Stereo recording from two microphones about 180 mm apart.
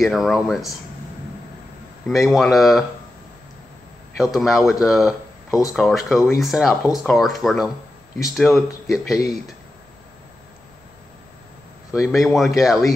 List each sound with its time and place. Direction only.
0.0 s speech: centre (ahead or behind)
2.0 s speech: centre (ahead or behind)
4.2 s speech: centre (ahead or behind)
8.8 s speech: 20° left (ahead or behind)
11.9 s speech: centre (ahead or behind)